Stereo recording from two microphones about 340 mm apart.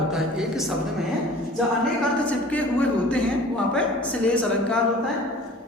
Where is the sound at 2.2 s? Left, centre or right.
Centre.